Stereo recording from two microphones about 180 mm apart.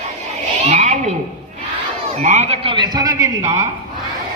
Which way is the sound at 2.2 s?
40° right (ahead or behind).